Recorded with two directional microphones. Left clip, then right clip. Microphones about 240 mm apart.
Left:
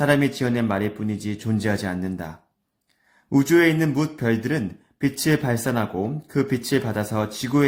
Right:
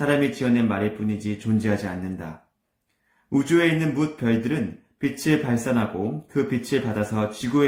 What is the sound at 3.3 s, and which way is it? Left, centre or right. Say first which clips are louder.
Speech: left 3 dB; left.